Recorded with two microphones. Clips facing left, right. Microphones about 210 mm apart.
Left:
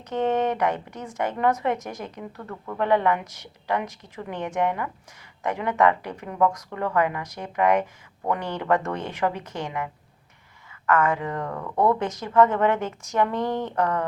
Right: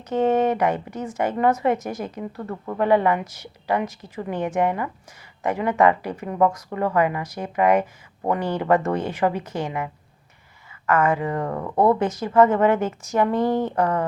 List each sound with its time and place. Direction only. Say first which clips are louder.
0.1 s a woman's voice: right 4 dB; 5° right (ahead or behind)
11.4 s speech: right 3 dB; 25° right (ahead or behind)
11.9 s a woman's voice: right 3 dB; 5° right (ahead or behind)